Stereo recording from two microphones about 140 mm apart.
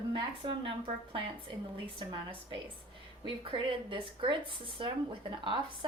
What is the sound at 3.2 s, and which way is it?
A woman's voice, 40° right (ahead or behind).